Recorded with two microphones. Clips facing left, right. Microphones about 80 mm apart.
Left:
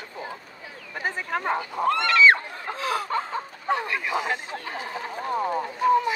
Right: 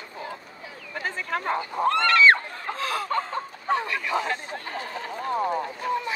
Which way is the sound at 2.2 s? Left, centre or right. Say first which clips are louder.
Even; centre.